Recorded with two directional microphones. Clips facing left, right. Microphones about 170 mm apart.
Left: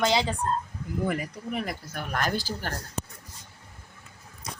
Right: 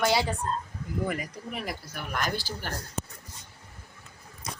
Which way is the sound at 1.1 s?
55° left (ahead or behind).